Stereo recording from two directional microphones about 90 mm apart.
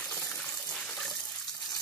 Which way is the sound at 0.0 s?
15° left (ahead or behind).